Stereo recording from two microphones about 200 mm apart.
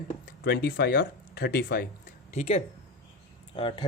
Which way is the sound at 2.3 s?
35° left (ahead or behind).